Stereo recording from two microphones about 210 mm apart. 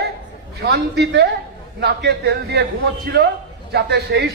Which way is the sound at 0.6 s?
50° right (ahead or behind).